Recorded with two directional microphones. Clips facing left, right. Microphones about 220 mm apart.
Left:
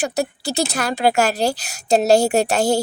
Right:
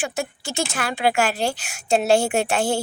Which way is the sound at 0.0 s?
40° left (ahead or behind).